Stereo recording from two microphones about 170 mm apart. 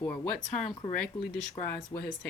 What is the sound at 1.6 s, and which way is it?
Speech, 35° left (ahead or behind).